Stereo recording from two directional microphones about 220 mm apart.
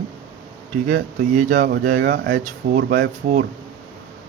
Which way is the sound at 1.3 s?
35° right (ahead or behind).